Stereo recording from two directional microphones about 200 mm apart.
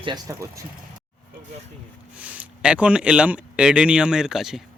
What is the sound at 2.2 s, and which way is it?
Speech, 5° right (ahead or behind).